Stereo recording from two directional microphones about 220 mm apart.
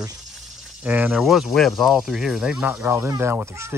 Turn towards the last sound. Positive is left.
turn(degrees=-10)  # may be behind; listen again after turning